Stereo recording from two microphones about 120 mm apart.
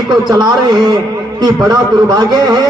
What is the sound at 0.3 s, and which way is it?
A man's voice, 35° right (ahead or behind).